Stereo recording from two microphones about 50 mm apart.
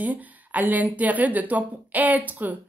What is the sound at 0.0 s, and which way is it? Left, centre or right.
Speech, right.